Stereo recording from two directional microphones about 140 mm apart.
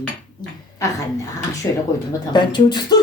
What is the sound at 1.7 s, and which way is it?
Speech, 25° left (ahead or behind).